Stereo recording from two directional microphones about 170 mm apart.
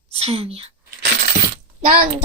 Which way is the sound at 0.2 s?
35° right (ahead or behind).